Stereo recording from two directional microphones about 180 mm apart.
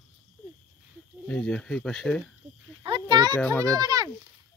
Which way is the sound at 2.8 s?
25° right (ahead or behind).